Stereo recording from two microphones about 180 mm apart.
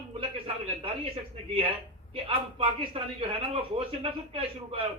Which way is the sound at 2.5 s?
30° right (ahead or behind).